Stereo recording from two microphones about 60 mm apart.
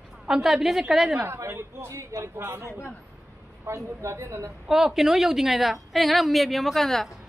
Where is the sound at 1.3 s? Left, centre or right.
Right.